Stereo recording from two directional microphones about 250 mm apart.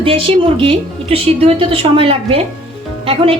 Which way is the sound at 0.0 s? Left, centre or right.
Right.